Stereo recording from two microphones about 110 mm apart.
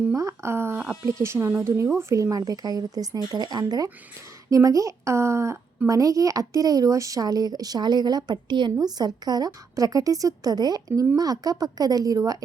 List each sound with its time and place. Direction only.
0.1 s a child's voice: 25° right (ahead or behind)